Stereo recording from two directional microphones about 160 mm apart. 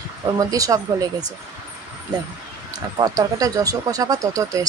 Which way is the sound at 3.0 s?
20° right (ahead or behind).